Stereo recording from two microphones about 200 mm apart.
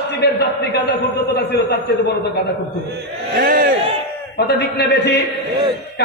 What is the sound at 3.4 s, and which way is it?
Crowd, 55° right (ahead or behind).